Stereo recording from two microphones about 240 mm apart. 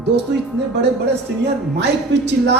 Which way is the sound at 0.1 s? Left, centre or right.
Right.